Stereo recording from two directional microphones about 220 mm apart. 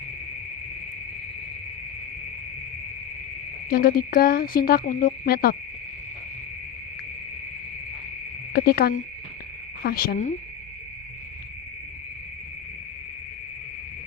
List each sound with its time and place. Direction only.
3.7 s speech: 40° left (ahead or behind)
8.5 s speech: 45° left (ahead or behind)